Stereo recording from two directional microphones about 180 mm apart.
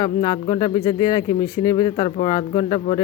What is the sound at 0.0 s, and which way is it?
Speech, 20° left (ahead or behind).